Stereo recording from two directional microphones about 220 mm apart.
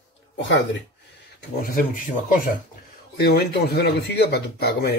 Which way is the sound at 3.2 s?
45° left (ahead or behind).